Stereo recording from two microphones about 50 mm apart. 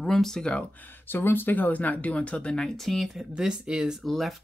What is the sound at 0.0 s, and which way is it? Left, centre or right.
Speech, centre.